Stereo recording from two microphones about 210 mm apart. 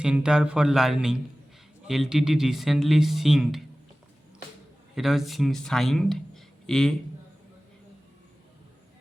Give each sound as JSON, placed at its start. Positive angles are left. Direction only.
{"t": 0.0, "sound": "speech", "side_deg": -5}
{"t": 4.9, "sound": "speech", "side_deg": 0}